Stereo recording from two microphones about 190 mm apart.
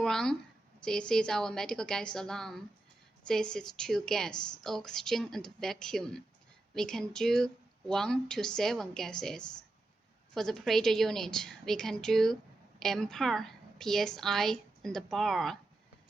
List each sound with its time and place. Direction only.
0.0 s a woman's voice: 5° left (ahead or behind)
10.3 s a woman's voice: centre (ahead or behind)